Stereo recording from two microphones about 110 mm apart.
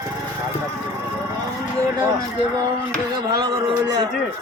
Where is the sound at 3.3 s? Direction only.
40° right (ahead or behind).